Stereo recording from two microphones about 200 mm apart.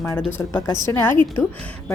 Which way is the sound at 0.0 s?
10° left (ahead or behind).